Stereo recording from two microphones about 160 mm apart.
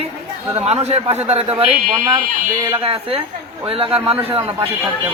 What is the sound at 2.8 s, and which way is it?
A man's voice, 35° right (ahead or behind).